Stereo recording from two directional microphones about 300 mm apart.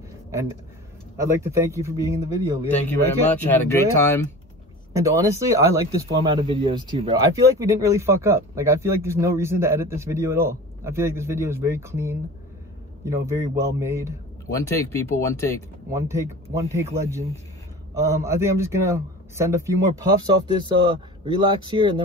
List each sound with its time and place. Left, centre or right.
1.1 s speech: centre
3.3 s speech: centre
4.9 s speech: centre
14.5 s speech: centre
15.9 s speech: centre